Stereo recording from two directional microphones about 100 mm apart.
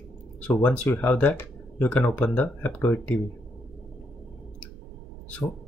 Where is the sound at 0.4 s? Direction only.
15° left (ahead or behind).